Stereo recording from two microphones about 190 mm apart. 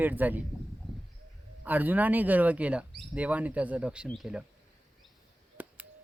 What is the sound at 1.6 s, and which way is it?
Speech, 10° right (ahead or behind).